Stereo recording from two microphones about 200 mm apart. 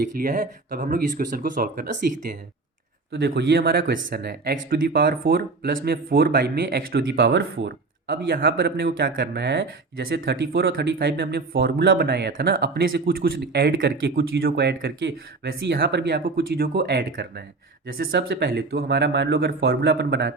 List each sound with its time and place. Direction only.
0.2 s speech: 45° right (ahead or behind)
3.1 s speech: 60° right (ahead or behind)